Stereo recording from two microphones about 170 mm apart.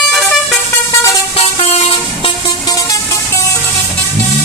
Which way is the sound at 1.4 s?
35° left (ahead or behind).